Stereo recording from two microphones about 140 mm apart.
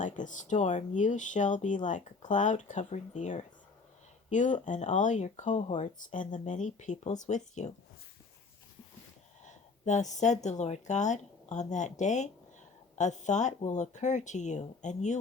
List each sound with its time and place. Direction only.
0.0 s speech: 60° left (ahead or behind)
9.4 s speech: 60° left (ahead or behind)